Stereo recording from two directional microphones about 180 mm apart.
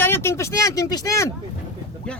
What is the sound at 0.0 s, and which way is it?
Speech, 15° left (ahead or behind).